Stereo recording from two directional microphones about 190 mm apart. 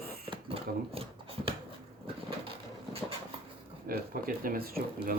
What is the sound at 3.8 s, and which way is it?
Speech, 50° right (ahead or behind).